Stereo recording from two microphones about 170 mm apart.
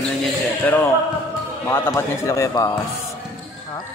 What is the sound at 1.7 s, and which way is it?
Speech, 15° left (ahead or behind).